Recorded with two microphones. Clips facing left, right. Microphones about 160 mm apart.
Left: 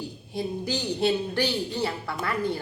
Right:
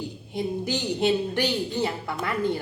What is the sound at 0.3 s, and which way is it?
A woman's voice, 20° right (ahead or behind).